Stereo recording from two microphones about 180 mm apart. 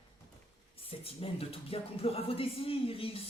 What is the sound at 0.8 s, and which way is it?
Speech, 30° left (ahead or behind).